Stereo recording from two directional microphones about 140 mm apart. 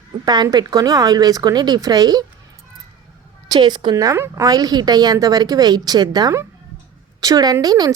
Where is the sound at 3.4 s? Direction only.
30° right (ahead or behind).